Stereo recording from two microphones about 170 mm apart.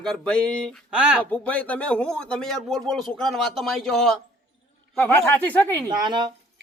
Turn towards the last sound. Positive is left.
turn(degrees=-25)  # may be behind; listen again after turning